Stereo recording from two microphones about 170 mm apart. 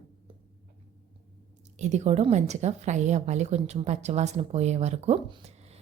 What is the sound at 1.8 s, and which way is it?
A woman's voice, 40° right (ahead or behind).